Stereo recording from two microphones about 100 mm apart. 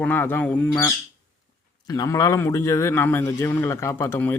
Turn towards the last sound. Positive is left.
turn(degrees=25)  # may be behind; listen again after turning